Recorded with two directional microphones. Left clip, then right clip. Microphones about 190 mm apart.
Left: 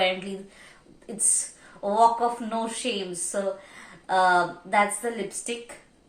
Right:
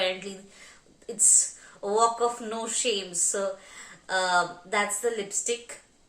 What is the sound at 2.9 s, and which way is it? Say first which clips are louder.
Speech: right 4 dB; 20° right (ahead or behind).